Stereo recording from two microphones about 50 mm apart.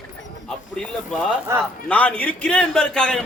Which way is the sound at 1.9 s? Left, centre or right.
Left.